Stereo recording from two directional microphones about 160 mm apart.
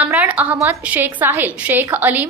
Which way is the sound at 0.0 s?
10° right (ahead or behind).